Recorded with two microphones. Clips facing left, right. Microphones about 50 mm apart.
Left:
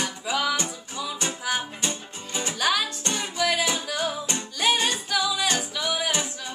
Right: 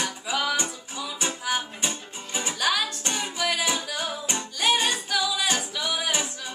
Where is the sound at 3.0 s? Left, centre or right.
Centre.